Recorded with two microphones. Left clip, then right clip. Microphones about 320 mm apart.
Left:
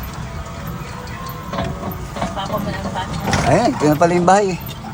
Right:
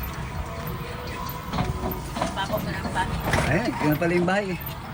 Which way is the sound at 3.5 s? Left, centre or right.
Left.